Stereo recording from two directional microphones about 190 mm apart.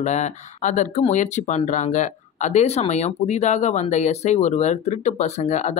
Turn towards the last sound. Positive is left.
turn(degrees=40)  # may be behind; listen again after turning